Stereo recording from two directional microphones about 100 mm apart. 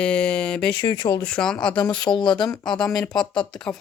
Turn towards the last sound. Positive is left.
turn(degrees=5)  # may be behind; listen again after turning